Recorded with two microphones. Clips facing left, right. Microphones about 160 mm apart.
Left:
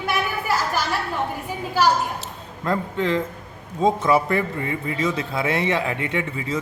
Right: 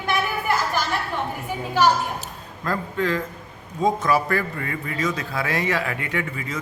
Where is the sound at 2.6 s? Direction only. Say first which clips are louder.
Left 2 dB; 25° left (ahead or behind).